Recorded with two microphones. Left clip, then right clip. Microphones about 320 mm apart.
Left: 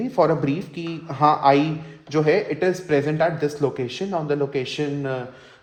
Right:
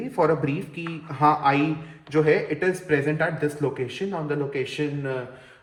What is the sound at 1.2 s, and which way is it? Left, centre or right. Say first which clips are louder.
Speech: left 3 dB; left.